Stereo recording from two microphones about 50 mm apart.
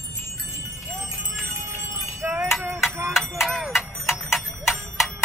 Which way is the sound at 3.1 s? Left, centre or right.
Centre.